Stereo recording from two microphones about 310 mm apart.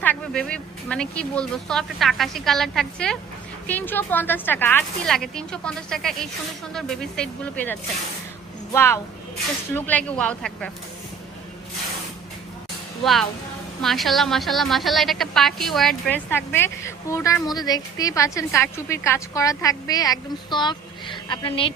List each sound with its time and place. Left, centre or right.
0.0 s a woman's voice: centre
13.8 s a woman's voice: centre